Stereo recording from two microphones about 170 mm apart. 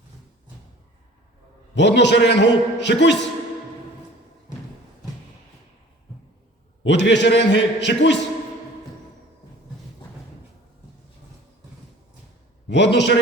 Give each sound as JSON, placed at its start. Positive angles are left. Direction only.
{"t": 1.7, "sound": "a man's voice", "side_deg": 90}
{"t": 6.8, "sound": "a man's voice", "side_deg": 90}
{"t": 12.6, "sound": "a man's voice", "side_deg": 90}